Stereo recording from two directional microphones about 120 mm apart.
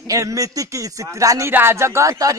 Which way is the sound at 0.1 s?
25° right (ahead or behind).